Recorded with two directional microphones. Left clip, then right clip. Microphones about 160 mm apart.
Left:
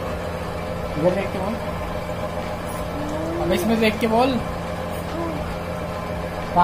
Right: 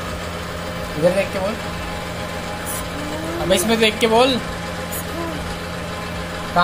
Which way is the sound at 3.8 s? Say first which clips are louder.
Right 4 dB; 30° right (ahead or behind).